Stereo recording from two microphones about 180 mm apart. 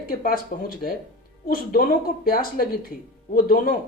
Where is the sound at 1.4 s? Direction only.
55° left (ahead or behind).